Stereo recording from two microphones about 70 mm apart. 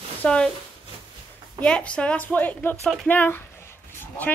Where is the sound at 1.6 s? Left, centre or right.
Centre.